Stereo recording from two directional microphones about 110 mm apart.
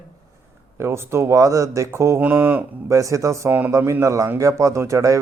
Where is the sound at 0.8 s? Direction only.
25° right (ahead or behind).